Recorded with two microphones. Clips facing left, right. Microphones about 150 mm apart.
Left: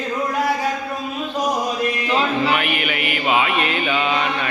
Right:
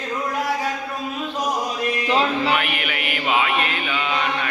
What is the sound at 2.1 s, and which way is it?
Music, 30° right (ahead or behind).